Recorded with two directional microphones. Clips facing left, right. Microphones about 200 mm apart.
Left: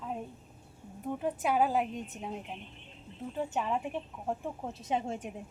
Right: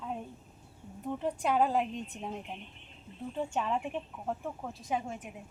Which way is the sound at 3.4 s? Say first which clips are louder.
Even; 10° left (ahead or behind).